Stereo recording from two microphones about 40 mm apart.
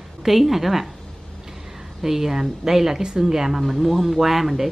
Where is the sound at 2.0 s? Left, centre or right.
Centre.